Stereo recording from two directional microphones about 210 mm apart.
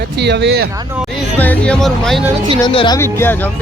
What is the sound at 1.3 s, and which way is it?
Speech, 5° left (ahead or behind).